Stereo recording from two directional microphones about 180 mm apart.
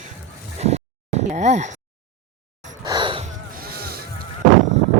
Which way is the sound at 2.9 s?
25° right (ahead or behind).